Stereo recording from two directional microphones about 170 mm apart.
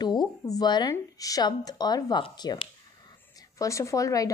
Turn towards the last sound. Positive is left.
turn(degrees=20)  # may be behind; listen again after turning